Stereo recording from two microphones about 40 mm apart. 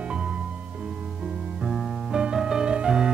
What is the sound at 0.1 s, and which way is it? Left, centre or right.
Music, right.